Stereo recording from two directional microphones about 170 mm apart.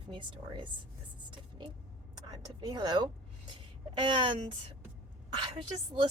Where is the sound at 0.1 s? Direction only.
30° right (ahead or behind).